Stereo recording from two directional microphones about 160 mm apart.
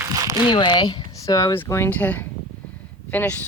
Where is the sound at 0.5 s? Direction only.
30° left (ahead or behind).